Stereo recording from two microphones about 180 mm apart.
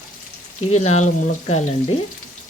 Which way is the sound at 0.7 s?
40° left (ahead or behind).